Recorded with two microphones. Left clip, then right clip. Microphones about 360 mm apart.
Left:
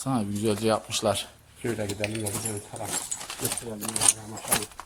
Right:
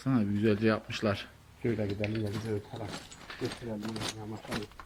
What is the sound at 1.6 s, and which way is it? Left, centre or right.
Speech, left.